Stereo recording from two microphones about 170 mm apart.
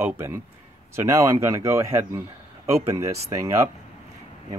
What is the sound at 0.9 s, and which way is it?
Speech, 15° right (ahead or behind).